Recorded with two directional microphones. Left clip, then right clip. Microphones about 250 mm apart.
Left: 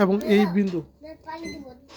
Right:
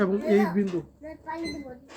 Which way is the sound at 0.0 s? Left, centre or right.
Left.